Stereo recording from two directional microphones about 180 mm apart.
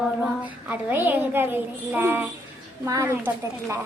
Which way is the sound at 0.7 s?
10° right (ahead or behind).